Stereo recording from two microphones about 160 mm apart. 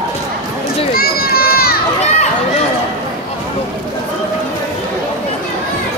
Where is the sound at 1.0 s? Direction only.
70° left (ahead or behind).